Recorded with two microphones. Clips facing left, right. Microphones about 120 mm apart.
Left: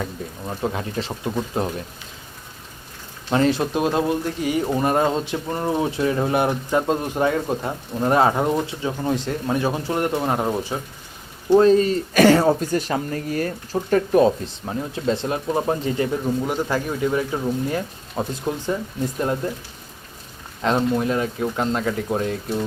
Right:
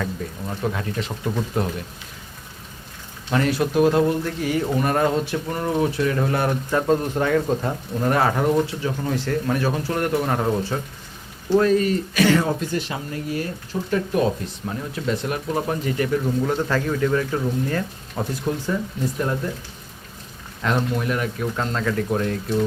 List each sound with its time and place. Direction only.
0.0 s speech: 20° left (ahead or behind)
3.3 s speech: 25° left (ahead or behind)
11.4 s speech: 25° left (ahead or behind)
12.1 s speech: 40° left (ahead or behind); by 16.2 s 25° left (ahead or behind)
16.4 s speech: 10° left (ahead or behind)